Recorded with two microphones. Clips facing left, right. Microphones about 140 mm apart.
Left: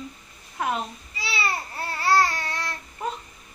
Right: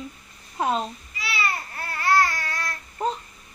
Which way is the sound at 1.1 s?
30° left (ahead or behind).